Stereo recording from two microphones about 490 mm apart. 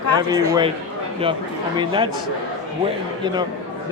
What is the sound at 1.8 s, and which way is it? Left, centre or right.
Speech, centre.